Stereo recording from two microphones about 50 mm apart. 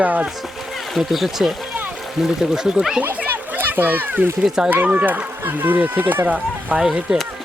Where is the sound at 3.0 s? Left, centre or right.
Right.